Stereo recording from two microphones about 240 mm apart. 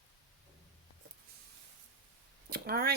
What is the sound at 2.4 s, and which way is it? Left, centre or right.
Speech, right.